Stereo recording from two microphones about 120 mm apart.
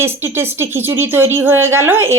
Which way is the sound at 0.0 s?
20° right (ahead or behind).